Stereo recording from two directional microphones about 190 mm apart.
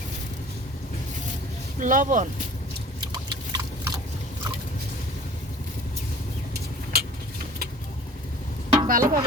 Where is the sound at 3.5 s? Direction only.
20° right (ahead or behind).